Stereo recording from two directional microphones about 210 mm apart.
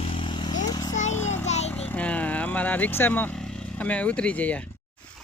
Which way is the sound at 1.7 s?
5° left (ahead or behind).